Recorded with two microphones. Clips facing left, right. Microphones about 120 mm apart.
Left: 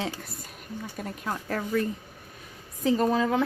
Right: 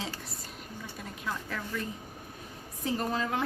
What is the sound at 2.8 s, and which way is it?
Speech, 90° left.